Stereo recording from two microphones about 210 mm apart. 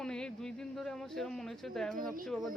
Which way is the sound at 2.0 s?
40° right (ahead or behind).